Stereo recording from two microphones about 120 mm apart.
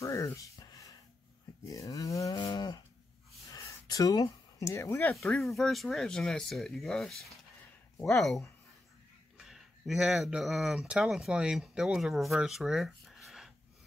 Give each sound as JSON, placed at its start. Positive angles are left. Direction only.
{"t": 0.0, "sound": "a sound", "side_deg": 25}
{"t": 1.7, "sound": "speech", "side_deg": 30}
{"t": 2.3, "sound": "cattle", "side_deg": 35}
{"t": 3.5, "sound": "a sound", "side_deg": 30}
{"t": 5.1, "sound": "speech", "side_deg": 5}
{"t": 9.4, "sound": "speech", "side_deg": -5}